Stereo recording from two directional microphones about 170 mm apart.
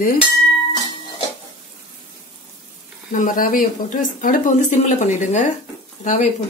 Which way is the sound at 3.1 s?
50° left (ahead or behind).